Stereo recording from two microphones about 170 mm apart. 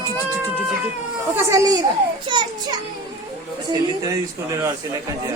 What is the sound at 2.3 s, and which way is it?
Children playing, 25° right (ahead or behind).